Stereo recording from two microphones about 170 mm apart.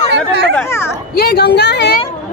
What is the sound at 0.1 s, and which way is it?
Speech, 90° right.